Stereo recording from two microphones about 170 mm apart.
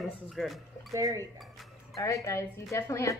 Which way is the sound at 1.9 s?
20° left (ahead or behind).